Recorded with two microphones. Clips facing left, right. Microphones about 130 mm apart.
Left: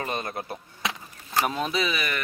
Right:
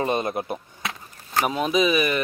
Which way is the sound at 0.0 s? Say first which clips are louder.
Right 7 dB; 20° right (ahead or behind).